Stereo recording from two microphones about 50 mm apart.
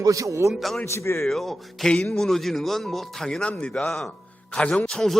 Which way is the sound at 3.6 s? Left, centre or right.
Centre.